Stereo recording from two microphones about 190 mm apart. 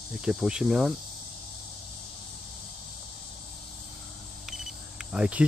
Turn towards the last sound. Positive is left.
turn(degrees=-5)  # may be behind; listen again after turning